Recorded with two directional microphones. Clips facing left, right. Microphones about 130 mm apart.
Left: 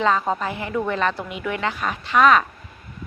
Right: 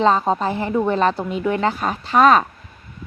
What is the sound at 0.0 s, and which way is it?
A woman's voice, 30° right (ahead or behind).